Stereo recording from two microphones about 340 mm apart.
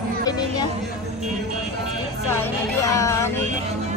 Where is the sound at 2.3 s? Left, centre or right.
Centre.